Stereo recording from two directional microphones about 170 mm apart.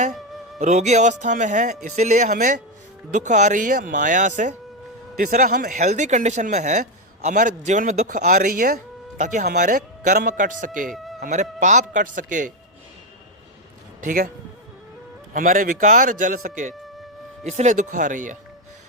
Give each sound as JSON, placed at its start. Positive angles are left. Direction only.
{"t": 0.6, "sound": "speech", "side_deg": -45}
{"t": 14.0, "sound": "speech", "side_deg": -55}
{"t": 15.3, "sound": "speech", "side_deg": -55}